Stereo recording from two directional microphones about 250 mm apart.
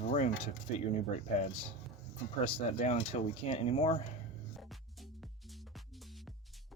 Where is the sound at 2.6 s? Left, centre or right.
Left.